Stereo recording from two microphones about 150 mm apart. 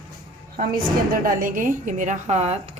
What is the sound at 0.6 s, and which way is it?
A woman's voice, 70° right (ahead or behind).